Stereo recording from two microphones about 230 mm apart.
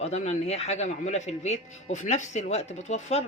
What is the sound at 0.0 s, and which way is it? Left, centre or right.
Speech, left.